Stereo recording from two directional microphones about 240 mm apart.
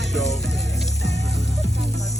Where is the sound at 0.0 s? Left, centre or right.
Centre.